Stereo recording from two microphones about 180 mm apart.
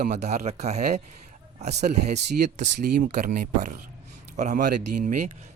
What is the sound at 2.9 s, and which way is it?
Speech, 55° right (ahead or behind).